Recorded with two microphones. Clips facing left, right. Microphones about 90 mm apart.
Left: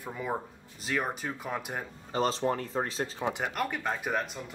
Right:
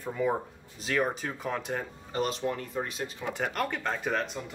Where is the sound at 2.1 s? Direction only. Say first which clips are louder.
Left 3 dB; 30° left (ahead or behind).